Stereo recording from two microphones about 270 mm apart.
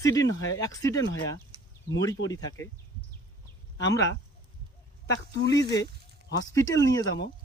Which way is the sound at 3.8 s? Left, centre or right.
Centre.